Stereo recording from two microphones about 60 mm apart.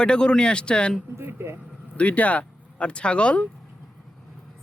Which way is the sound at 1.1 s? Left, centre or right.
Right.